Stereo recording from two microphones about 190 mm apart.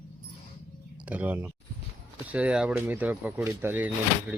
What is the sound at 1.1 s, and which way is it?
Speech, 10° right (ahead or behind).